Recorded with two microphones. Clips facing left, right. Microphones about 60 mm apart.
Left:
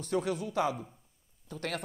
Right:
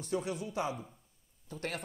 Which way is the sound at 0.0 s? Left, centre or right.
Left.